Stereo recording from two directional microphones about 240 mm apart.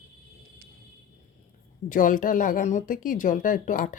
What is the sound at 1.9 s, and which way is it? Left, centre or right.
Speech, left.